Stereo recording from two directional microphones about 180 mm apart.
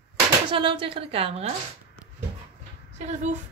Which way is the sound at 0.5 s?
30° right (ahead or behind).